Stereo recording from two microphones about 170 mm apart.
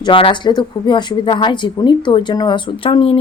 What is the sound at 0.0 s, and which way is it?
Speech, 30° left (ahead or behind).